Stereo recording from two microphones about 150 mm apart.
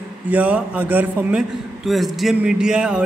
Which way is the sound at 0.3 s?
10° right (ahead or behind).